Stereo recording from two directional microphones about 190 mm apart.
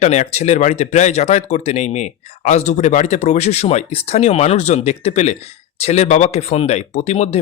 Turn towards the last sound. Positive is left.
turn(degrees=35)  # may be behind; listen again after turning